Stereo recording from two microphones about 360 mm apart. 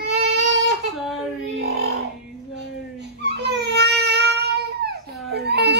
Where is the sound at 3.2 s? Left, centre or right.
Right.